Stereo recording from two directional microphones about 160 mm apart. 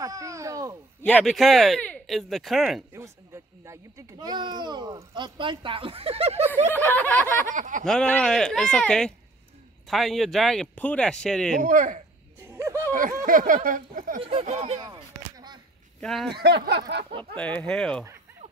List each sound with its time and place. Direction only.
0.0 s speech: 20° right (ahead or behind)
1.0 s speech: 5° left (ahead or behind)
2.9 s speech: 15° right (ahead or behind); by 6.5 s 40° right (ahead or behind)
6.7 s speech: 10° left (ahead or behind)
7.5 s speech: 55° right (ahead or behind)
7.8 s speech: 5° left (ahead or behind)
11.6 s speech: 55° right (ahead or behind)
12.4 s speech: 15° right (ahead or behind)
12.9 s speech: 55° right (ahead or behind)
14.2 s speech: 40° right (ahead or behind)
14.9 s a sound: 25° right (ahead or behind)
16.0 s speech: centre (ahead or behind)
16.3 s speech: 90° right
17.4 s speech: 10° left (ahead or behind)